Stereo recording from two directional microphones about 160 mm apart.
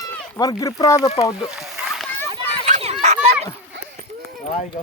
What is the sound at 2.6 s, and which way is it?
Children playing, 45° right (ahead or behind).